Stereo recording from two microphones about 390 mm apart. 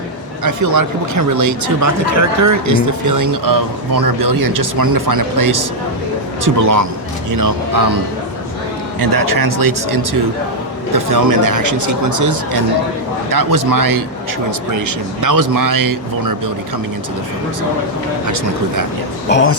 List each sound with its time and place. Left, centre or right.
0.4 s speech: right
9.0 s speech: right
18.3 s speech: right
19.3 s speech: left